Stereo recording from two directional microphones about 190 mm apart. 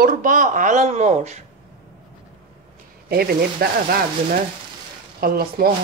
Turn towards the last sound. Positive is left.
turn(degrees=-50)  # may be behind; listen again after turning